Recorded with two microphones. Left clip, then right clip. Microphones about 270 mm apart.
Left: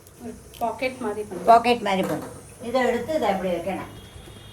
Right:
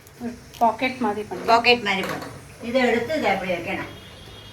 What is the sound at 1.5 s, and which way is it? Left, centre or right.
Speech, centre.